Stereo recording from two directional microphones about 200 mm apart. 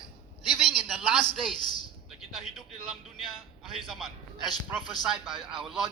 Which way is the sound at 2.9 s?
Centre (ahead or behind).